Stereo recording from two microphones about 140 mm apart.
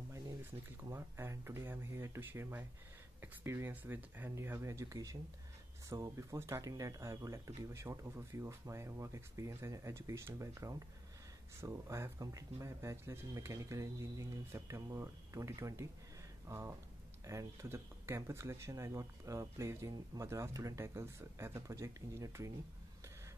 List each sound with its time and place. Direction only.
0.8 s speech: 20° right (ahead or behind)